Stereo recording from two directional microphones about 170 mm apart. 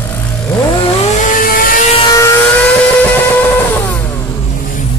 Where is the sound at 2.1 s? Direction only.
20° left (ahead or behind).